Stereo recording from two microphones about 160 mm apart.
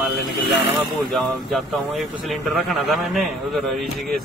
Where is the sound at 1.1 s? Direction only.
Centre (ahead or behind).